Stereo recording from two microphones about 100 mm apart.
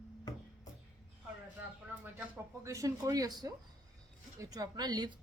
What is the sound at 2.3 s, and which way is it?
A woman's voice, 30° right (ahead or behind).